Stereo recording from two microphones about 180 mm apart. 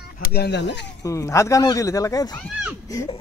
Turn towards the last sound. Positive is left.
turn(degrees=15)  # may be behind; listen again after turning